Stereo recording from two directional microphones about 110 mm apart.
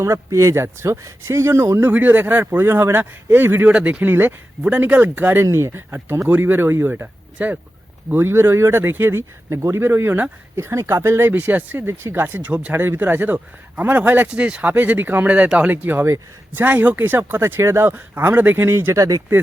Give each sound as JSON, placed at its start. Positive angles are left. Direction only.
{"t": 0.0, "sound": "speech", "side_deg": -30}